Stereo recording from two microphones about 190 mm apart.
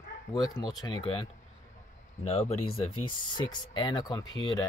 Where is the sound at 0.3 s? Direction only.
20° left (ahead or behind).